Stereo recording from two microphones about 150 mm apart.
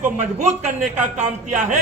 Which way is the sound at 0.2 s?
50° right (ahead or behind).